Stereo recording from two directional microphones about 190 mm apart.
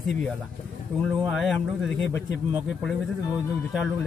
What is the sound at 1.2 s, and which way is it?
Speech, centre (ahead or behind).